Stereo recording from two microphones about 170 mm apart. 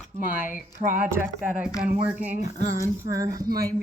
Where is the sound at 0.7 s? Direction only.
50° right (ahead or behind).